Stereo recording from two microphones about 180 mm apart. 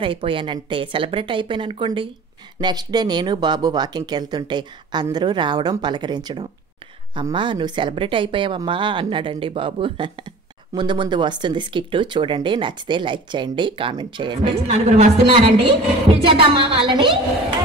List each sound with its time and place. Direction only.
0.0 s speech: 30° right (ahead or behind)
14.7 s a woman's voice: 35° right (ahead or behind)